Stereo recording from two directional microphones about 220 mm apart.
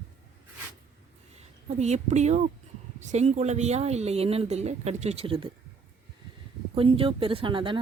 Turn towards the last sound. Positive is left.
turn(degrees=-25)  # may be behind; listen again after turning